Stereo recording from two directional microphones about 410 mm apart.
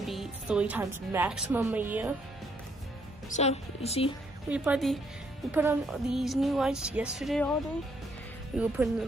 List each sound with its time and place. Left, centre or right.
0.0 s a woman's voice: centre
3.3 s a woman's voice: centre
4.5 s a woman's voice: centre
8.5 s a woman's voice: centre